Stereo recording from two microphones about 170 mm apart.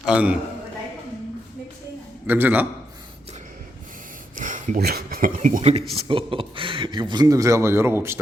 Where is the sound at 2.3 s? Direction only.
10° right (ahead or behind).